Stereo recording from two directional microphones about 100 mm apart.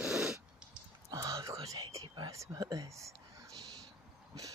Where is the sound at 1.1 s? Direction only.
35° right (ahead or behind).